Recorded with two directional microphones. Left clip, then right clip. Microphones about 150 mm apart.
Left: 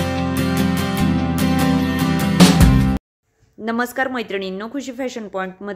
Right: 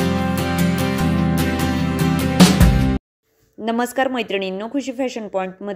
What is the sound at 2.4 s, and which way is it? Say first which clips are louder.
Music: left 1 dB; centre (ahead or behind).